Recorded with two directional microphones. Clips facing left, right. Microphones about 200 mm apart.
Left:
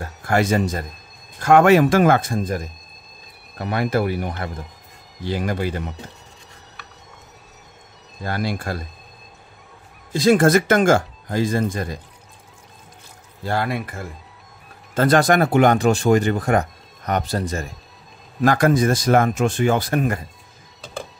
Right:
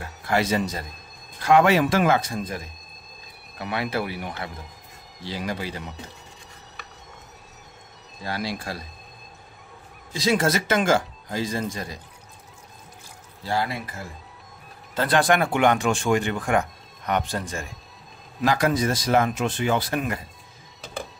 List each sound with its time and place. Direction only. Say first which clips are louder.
0.0 s speech: left 4 dB; 50° left (ahead or behind)
8.2 s speech: left 5 dB; 50° left (ahead or behind)
10.1 s speech: left 8 dB; 50° left (ahead or behind)
13.4 s speech: left 3 dB; 55° left (ahead or behind)
15.0 s speech: left 5 dB; 45° left (ahead or behind)
18.4 s speech: left 5 dB; 50° left (ahead or behind)